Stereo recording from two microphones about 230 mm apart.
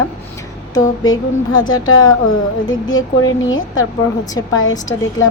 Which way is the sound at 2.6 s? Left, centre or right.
Centre.